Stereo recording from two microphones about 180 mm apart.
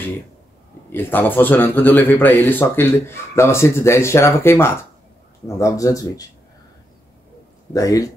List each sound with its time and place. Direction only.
0.9 s speech: 10° left (ahead or behind)
7.7 s speech: 20° left (ahead or behind)